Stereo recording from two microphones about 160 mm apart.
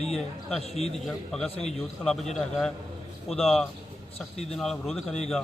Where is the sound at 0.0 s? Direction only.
5° left (ahead or behind).